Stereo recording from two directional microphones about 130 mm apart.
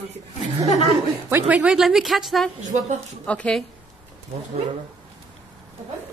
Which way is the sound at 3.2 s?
10° left (ahead or behind).